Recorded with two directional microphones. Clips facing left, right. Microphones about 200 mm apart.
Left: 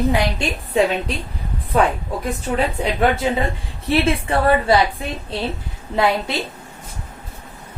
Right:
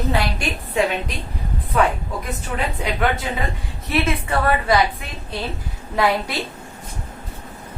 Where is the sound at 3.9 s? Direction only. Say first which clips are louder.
Left 4 dB; 30° left (ahead or behind).